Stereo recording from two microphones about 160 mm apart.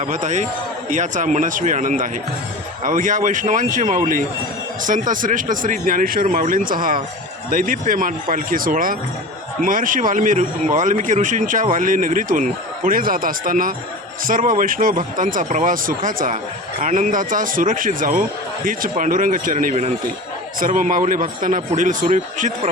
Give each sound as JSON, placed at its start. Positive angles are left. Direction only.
{"t": 0.0, "sound": "speech", "side_deg": -50}